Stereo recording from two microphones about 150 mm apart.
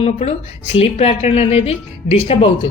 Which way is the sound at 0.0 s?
45° left (ahead or behind).